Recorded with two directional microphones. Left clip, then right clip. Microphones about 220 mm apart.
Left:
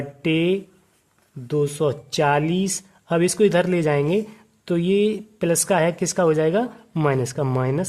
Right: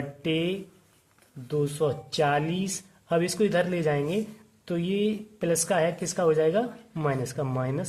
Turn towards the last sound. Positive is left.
turn(degrees=40)  # may be behind; listen again after turning